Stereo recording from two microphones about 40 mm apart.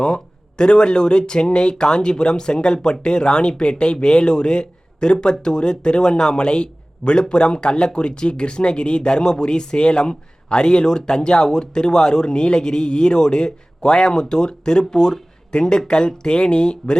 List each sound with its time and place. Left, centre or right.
0.0 s speech: left